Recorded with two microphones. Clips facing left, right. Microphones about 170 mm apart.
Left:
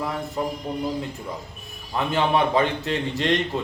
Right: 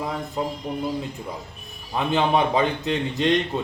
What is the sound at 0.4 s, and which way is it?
Speech, 20° right (ahead or behind).